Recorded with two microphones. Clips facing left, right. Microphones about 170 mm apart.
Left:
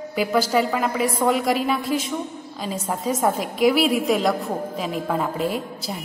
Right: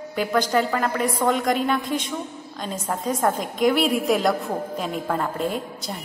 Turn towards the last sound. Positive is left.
turn(degrees=5)  # may be behind; listen again after turning